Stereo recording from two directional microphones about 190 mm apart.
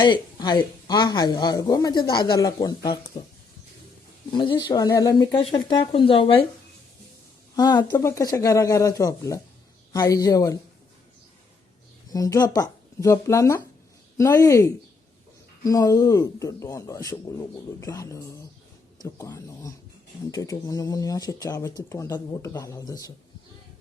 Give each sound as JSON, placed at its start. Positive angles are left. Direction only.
{"t": 0.0, "sound": "speech", "side_deg": 25}
{"t": 4.3, "sound": "speech", "side_deg": 25}
{"t": 7.5, "sound": "speech", "side_deg": 20}
{"t": 12.1, "sound": "speech", "side_deg": 20}